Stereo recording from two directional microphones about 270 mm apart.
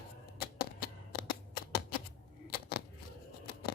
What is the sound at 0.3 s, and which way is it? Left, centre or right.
Shuffling cards, left.